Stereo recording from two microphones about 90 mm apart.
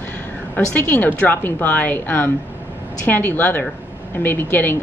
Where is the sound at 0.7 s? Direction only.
25° left (ahead or behind).